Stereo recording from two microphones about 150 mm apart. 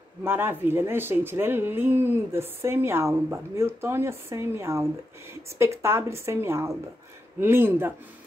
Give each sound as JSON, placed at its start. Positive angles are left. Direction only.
{"t": 0.2, "sound": "speech", "side_deg": -15}